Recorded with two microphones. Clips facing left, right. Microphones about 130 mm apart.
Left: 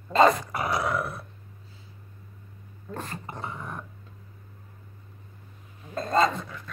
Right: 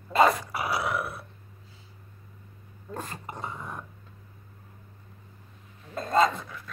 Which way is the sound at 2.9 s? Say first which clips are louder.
Left 1 dB; 15° right (ahead or behind).